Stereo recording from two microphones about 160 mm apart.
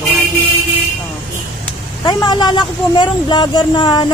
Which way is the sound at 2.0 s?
25° left (ahead or behind).